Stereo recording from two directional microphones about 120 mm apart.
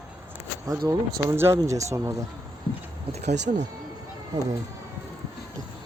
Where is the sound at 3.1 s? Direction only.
70° right (ahead or behind).